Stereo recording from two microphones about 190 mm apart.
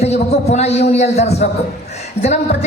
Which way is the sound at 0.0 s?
35° left (ahead or behind).